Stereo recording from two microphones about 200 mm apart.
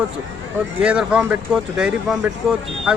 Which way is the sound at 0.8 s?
5° right (ahead or behind).